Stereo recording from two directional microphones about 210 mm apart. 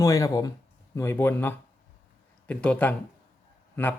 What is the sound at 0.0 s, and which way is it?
Speech, 15° left (ahead or behind).